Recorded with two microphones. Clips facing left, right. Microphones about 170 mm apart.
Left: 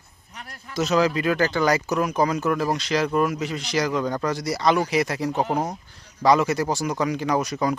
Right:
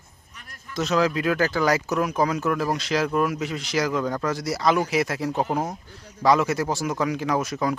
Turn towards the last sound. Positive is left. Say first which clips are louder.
# left 1 dB
turn(degrees=0)  # may be behind; listen again after turning